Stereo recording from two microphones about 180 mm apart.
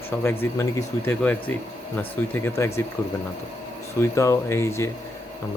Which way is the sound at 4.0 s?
15° left (ahead or behind).